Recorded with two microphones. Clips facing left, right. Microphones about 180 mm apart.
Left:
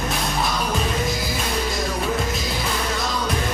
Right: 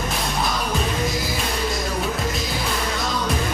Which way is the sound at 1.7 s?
Centre (ahead or behind).